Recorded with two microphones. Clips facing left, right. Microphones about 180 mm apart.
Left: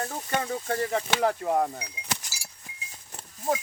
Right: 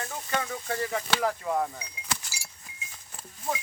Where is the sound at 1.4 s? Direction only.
45° left (ahead or behind).